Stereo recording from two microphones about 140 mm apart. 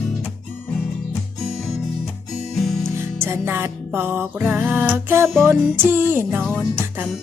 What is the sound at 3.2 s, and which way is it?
Music, 15° right (ahead or behind).